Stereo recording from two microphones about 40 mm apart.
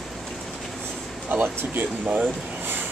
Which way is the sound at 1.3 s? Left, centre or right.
Right.